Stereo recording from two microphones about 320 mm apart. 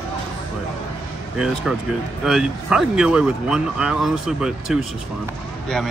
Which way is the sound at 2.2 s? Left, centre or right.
Centre.